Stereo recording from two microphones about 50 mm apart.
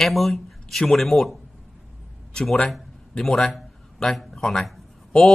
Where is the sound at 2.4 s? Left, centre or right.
Centre.